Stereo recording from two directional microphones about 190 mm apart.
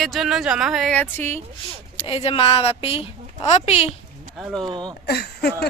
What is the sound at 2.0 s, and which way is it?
A woman's voice, 30° left (ahead or behind).